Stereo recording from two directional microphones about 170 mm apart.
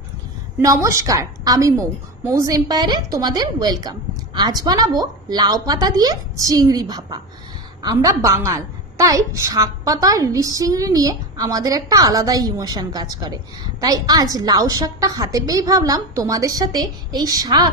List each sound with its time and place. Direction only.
0.6 s a woman's voice: 20° right (ahead or behind)